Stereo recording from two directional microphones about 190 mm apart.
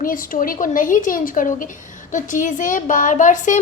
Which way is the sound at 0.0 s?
45° left (ahead or behind).